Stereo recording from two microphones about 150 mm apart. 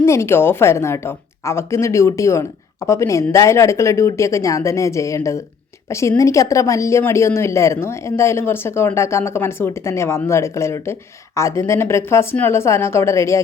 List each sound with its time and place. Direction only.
0.0 s a woman's voice: 20° left (ahead or behind)